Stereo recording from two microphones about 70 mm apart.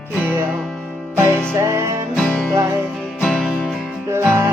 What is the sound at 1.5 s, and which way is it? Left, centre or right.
Music, right.